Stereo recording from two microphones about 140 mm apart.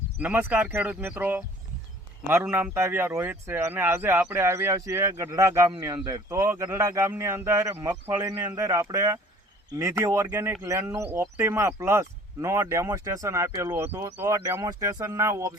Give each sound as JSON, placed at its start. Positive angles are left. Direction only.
{"t": 0.2, "sound": "speech", "side_deg": -10}